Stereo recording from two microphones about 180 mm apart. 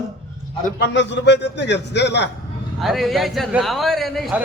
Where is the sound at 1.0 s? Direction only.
75° left (ahead or behind).